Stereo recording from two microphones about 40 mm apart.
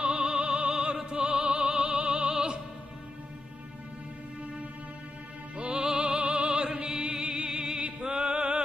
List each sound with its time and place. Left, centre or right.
0.0 s opera: right
5.6 s opera: right
8.0 s music: right